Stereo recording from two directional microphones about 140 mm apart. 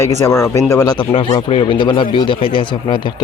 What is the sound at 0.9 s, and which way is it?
Speech, 35° left (ahead or behind).